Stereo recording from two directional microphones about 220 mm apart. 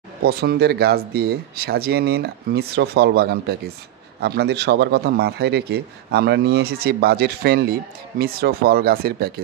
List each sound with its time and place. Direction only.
0.2 s a man's voice: 45° right (ahead or behind)